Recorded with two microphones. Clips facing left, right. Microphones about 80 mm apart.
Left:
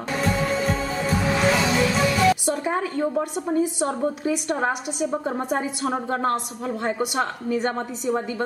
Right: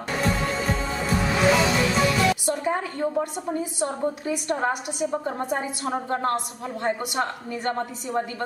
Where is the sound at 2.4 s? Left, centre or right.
Centre.